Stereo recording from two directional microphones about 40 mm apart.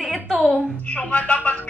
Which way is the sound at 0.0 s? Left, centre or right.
Centre.